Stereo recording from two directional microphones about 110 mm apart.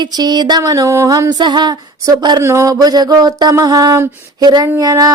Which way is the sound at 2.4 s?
25° right (ahead or behind).